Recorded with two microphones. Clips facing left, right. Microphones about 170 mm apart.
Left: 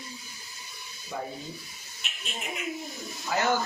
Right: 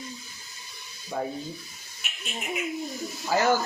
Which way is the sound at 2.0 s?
5° right (ahead or behind).